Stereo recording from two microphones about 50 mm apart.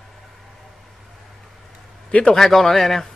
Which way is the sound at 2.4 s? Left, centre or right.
Centre.